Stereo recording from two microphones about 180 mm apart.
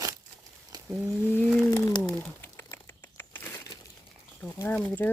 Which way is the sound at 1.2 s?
10° left (ahead or behind).